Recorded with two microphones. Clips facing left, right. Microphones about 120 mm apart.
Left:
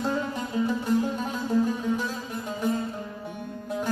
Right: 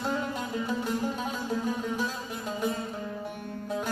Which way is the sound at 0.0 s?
Centre (ahead or behind).